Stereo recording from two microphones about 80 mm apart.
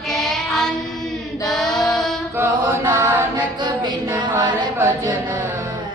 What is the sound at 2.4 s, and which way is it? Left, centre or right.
Chant, right.